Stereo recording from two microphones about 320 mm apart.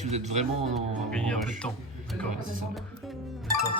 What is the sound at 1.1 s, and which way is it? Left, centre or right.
Speech, centre.